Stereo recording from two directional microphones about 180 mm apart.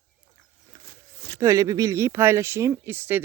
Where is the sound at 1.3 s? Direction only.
15° right (ahead or behind).